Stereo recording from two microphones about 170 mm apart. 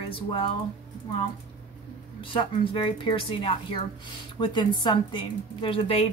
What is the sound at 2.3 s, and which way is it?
A woman's voice, 30° left (ahead or behind).